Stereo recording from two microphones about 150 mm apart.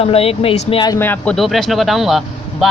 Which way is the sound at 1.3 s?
Centre (ahead or behind).